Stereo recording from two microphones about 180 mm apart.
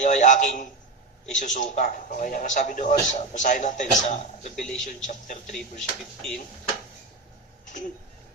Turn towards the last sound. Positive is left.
turn(degrees=45)  # may be behind; listen again after turning